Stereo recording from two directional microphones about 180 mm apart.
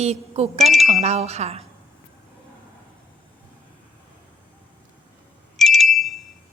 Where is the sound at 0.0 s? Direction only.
35° right (ahead or behind).